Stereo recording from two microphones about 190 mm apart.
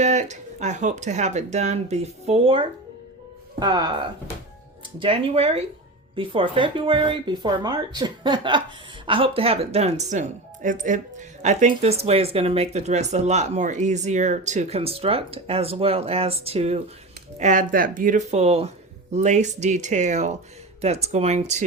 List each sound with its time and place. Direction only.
0.0 s speech: 40° right (ahead or behind)